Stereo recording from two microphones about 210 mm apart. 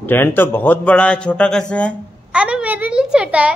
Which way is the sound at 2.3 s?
5° right (ahead or behind).